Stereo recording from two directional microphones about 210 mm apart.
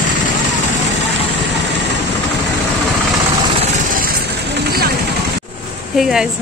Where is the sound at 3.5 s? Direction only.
35° right (ahead or behind).